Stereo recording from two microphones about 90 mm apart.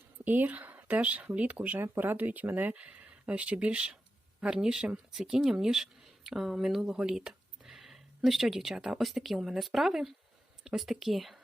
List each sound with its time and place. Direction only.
0.3 s speech: 20° right (ahead or behind); by 11.3 s centre (ahead or behind)